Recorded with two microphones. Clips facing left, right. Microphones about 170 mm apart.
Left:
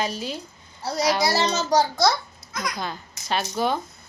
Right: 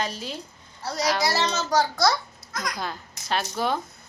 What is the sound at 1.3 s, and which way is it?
Speech, 35° left (ahead or behind).